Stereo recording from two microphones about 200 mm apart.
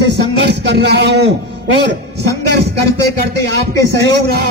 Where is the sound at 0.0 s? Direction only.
60° right (ahead or behind).